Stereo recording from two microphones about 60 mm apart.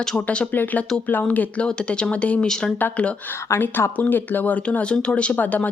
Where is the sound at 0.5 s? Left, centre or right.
Left.